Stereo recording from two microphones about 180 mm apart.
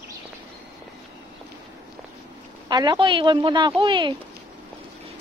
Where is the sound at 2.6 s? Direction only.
25° right (ahead or behind).